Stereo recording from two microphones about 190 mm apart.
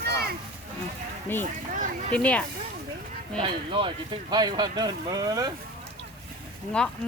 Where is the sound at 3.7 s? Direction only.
25° right (ahead or behind).